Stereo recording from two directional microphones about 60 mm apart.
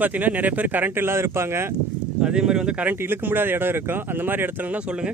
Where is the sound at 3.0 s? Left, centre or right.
Right.